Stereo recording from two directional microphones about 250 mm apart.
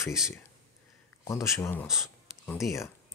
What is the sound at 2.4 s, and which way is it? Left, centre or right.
Speech, centre.